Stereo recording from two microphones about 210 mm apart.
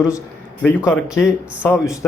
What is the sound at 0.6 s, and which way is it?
Speech, 10° left (ahead or behind).